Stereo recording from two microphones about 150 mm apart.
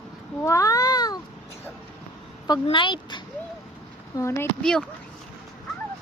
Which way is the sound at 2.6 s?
35° left (ahead or behind).